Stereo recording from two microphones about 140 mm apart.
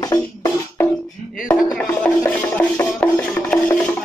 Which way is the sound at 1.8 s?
15° left (ahead or behind).